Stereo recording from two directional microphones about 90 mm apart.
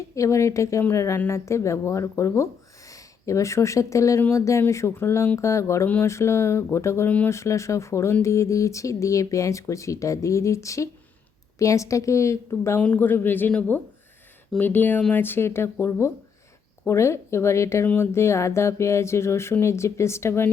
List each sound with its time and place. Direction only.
0.2 s speech: 35° left (ahead or behind)
12.8 s speech: 20° left (ahead or behind)